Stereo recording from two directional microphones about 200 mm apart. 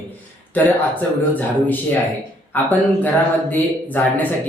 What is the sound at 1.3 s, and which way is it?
Speech, 10° left (ahead or behind).